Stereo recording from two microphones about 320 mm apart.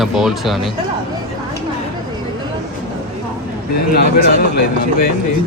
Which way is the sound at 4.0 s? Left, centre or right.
Left.